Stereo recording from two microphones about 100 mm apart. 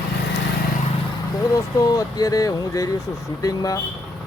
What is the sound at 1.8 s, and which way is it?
Speech, 35° left (ahead or behind).